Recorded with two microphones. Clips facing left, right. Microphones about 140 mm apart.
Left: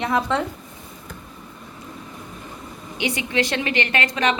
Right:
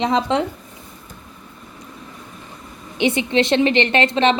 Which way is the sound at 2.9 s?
25° right (ahead or behind).